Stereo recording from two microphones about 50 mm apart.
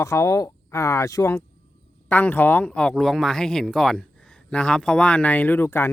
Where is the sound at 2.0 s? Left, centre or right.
Left.